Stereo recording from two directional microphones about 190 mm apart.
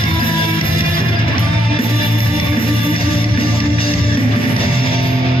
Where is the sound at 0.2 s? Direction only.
30° left (ahead or behind).